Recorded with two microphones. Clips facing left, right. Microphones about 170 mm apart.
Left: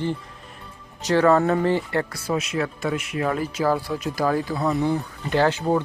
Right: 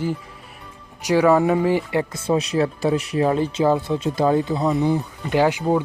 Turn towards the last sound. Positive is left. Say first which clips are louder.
# right 2 dB
turn(degrees=-10)  # may be behind; listen again after turning